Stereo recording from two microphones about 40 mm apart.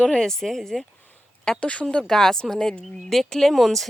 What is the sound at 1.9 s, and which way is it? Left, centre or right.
A woman's voice, centre.